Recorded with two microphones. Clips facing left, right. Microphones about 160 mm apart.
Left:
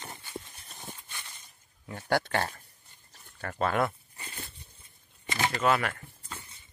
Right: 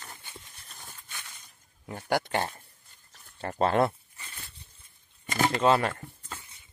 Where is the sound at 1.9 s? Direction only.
15° right (ahead or behind).